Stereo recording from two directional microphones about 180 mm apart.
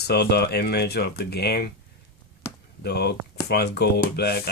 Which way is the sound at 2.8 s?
65° left (ahead or behind).